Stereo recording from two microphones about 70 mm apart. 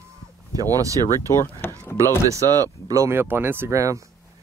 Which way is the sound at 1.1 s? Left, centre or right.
Left.